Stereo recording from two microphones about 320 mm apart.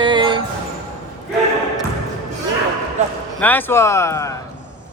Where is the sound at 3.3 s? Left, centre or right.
Centre.